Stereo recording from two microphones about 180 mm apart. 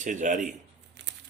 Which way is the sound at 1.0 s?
70° right (ahead or behind).